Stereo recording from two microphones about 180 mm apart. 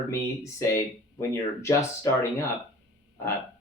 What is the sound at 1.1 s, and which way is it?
Speech, 15° left (ahead or behind).